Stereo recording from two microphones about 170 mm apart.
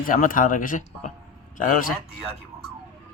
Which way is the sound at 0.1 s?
50° left (ahead or behind).